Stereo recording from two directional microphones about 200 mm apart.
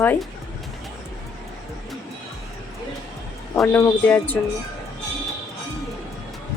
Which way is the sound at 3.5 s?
10° left (ahead or behind).